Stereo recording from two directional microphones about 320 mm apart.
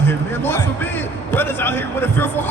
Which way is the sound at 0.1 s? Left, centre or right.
Centre.